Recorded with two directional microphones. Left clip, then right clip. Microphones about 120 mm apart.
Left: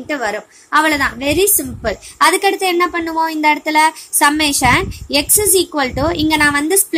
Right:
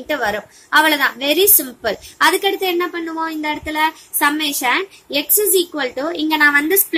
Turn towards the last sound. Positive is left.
turn(degrees=40)  # may be behind; listen again after turning